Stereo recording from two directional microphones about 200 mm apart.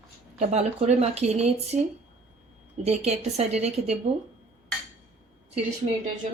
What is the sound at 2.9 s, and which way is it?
Speech, 30° right (ahead or behind).